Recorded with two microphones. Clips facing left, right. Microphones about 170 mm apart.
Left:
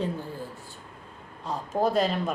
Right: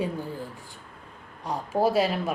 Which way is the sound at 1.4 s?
10° right (ahead or behind).